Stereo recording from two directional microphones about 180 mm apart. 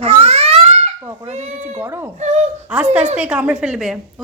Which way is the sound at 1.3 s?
40° right (ahead or behind).